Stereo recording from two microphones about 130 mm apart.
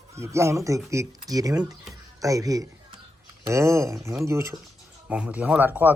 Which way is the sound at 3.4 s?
20° right (ahead or behind).